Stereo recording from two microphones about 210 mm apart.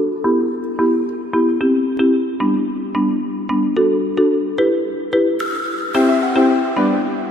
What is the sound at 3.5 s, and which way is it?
Music, centre (ahead or behind).